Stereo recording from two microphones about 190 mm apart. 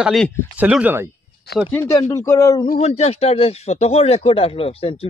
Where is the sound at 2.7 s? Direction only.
35° left (ahead or behind).